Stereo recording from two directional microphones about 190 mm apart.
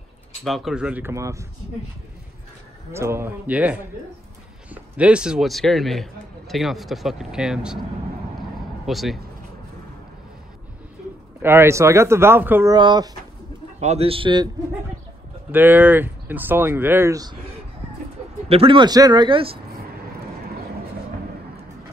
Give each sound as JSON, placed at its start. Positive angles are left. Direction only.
{"t": 0.4, "sound": "speech", "side_deg": 0}
{"t": 2.9, "sound": "speech", "side_deg": -15}
{"t": 8.8, "sound": "speech", "side_deg": 0}
{"t": 11.4, "sound": "speech", "side_deg": -15}
{"t": 12.7, "sound": "speech", "side_deg": -25}
{"t": 13.7, "sound": "speech", "side_deg": -35}
{"t": 15.5, "sound": "speech", "side_deg": -10}
{"t": 18.5, "sound": "speech", "side_deg": -30}